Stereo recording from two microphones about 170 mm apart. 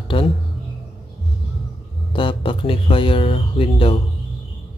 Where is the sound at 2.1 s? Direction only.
30° left (ahead or behind).